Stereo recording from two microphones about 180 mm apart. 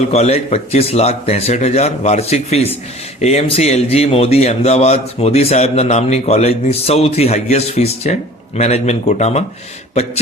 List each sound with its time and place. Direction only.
0.1 s a man's voice: 35° left (ahead or behind)